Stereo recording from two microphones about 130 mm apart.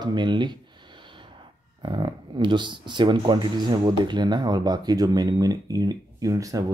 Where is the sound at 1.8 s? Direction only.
40° right (ahead or behind).